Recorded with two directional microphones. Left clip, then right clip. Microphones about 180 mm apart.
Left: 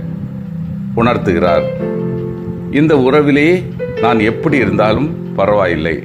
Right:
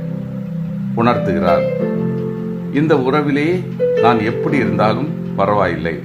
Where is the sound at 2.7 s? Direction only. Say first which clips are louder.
Left 5 dB; 25° left (ahead or behind).